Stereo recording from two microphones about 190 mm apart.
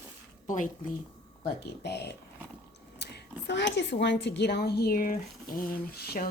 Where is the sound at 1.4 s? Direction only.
60° left (ahead or behind).